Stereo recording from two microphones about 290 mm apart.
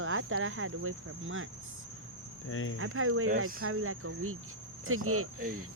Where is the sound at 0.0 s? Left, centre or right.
Right.